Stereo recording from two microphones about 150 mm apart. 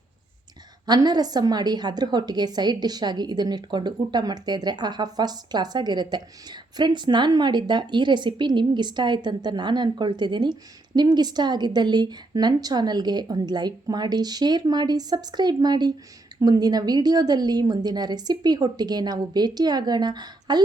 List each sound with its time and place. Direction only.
0.9 s a woman's voice: 25° right (ahead or behind)